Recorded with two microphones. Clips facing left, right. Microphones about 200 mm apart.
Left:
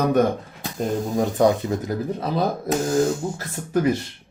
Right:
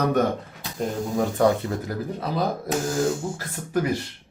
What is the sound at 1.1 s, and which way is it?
Speech, 20° left (ahead or behind).